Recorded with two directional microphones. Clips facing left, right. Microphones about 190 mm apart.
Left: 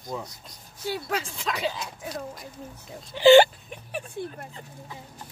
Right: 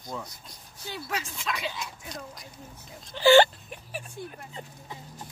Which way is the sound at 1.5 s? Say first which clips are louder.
Left 5 dB; 35° left (ahead or behind).